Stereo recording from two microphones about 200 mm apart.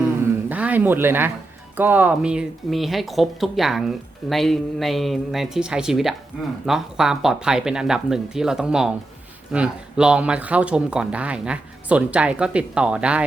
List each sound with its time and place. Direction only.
0.4 s speech: 10° right (ahead or behind)